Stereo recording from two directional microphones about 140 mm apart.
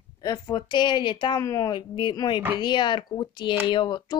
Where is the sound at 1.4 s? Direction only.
25° left (ahead or behind).